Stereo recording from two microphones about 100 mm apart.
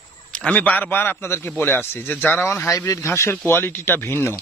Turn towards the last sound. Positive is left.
turn(degrees=25)  # may be behind; listen again after turning